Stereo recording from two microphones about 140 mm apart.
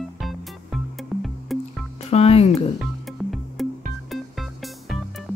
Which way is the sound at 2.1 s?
45° left (ahead or behind).